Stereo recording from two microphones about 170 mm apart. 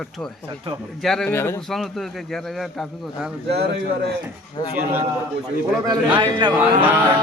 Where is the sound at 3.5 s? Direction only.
75° right (ahead or behind).